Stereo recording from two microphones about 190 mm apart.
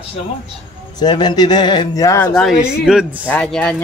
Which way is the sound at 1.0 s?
25° left (ahead or behind).